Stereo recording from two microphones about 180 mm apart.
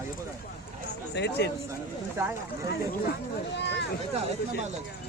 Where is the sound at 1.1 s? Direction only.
70° left (ahead or behind).